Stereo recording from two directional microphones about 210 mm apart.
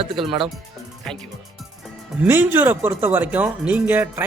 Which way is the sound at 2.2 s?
10° right (ahead or behind).